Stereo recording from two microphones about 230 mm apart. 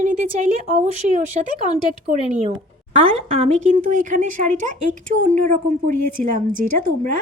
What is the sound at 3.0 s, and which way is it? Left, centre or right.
Speech, right.